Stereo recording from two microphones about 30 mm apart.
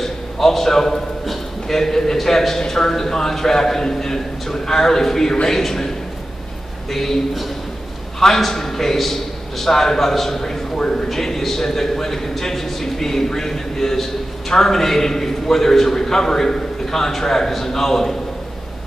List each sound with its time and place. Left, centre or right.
0.0 s a sound: centre
2.1 s a man's voice: centre
6.9 s a man's voice: centre
8.4 s a man's voice: centre
10.8 s a sound: left
11.1 s a man's voice: centre